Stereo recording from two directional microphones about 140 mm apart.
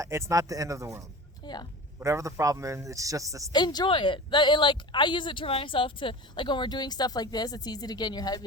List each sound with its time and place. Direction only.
0.0 s a man's voice: 20° right (ahead or behind)
3.5 s speech: 30° left (ahead or behind)